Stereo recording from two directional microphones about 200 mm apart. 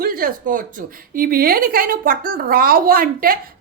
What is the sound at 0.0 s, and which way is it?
A woman's voice, 45° right (ahead or behind).